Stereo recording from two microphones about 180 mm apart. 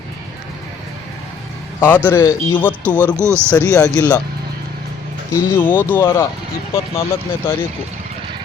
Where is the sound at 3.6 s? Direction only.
20° left (ahead or behind).